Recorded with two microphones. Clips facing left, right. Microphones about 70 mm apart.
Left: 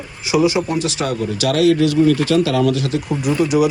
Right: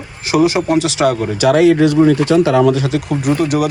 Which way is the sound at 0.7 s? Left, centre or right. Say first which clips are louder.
Right 7 dB; right.